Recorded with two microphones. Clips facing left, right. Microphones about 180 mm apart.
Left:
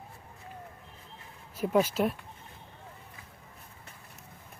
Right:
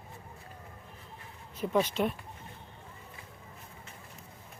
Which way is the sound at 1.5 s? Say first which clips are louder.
Left 3 dB; 10° left (ahead or behind).